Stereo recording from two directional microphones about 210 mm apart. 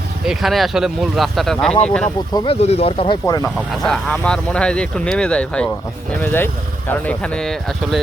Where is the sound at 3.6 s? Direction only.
Centre (ahead or behind).